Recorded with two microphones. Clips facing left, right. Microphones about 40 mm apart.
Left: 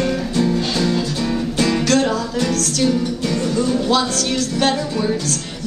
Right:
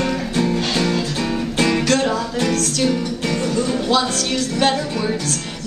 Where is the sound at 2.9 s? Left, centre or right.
Right.